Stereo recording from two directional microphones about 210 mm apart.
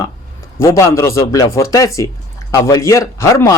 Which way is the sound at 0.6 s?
15° left (ahead or behind).